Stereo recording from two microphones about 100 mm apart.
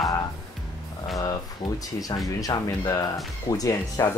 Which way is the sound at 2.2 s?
35° left (ahead or behind).